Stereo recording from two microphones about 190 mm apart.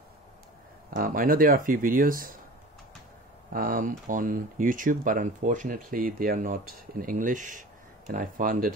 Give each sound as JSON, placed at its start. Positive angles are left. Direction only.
{"t": 0.8, "sound": "speech", "side_deg": -50}
{"t": 3.5, "sound": "speech", "side_deg": -45}